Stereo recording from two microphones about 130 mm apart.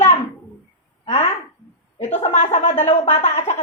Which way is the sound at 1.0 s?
55° left (ahead or behind).